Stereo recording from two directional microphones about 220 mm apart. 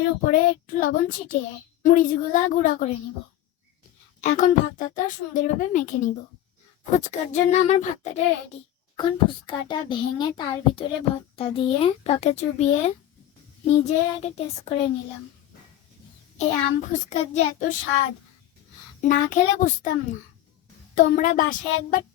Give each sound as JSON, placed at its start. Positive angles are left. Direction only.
{"t": 0.3, "sound": "a woman's voice", "side_deg": 40}
{"t": 4.2, "sound": "a woman's voice", "side_deg": 35}
{"t": 16.4, "sound": "a woman's voice", "side_deg": 35}
{"t": 19.0, "sound": "a woman's voice", "side_deg": 35}